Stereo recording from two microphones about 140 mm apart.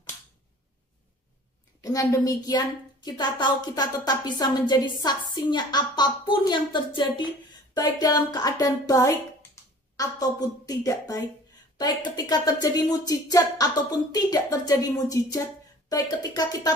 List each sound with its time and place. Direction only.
1.8 s a woman's voice: 25° left (ahead or behind)